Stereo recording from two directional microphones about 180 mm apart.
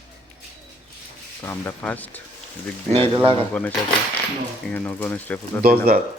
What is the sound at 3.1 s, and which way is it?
Speech, 30° right (ahead or behind).